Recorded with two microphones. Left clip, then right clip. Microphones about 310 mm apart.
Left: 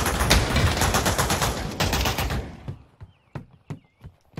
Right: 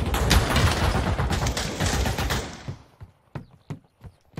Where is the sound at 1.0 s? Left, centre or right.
Left.